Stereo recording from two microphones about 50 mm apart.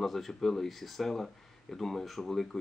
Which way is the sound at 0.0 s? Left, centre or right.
Centre.